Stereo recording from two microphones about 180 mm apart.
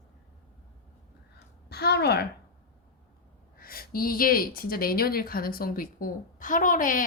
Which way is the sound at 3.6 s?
55° left (ahead or behind).